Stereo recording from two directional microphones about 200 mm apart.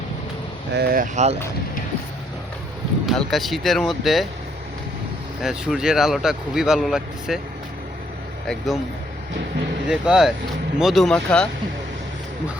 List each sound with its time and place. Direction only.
0.7 s speech: 50° right (ahead or behind)
3.1 s speech: centre (ahead or behind)
5.4 s speech: centre (ahead or behind)
8.4 s speech: centre (ahead or behind)
9.8 s speech: 5° right (ahead or behind)